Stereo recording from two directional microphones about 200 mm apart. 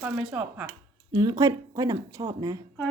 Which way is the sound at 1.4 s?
15° right (ahead or behind).